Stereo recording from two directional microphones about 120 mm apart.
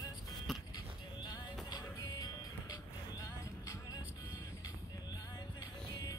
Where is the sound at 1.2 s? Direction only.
35° left (ahead or behind).